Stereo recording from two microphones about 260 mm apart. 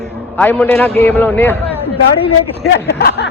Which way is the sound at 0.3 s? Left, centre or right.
Centre.